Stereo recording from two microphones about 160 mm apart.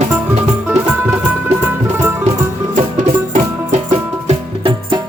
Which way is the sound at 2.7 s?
45° right (ahead or behind).